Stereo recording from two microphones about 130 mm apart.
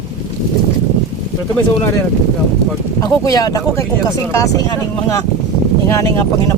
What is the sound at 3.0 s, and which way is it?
Speech, 25° left (ahead or behind).